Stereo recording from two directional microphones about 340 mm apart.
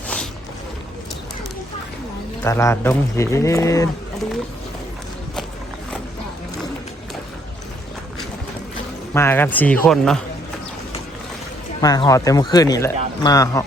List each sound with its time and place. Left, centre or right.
2.4 s a man's voice: centre
9.1 s a man's voice: centre
11.8 s a man's voice: centre